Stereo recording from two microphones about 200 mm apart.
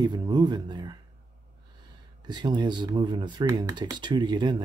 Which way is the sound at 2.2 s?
20° right (ahead or behind).